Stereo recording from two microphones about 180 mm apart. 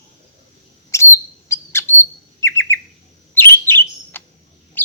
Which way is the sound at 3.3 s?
10° left (ahead or behind).